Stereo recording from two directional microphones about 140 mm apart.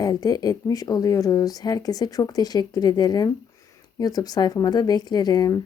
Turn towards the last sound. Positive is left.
turn(degrees=25)  # may be behind; listen again after turning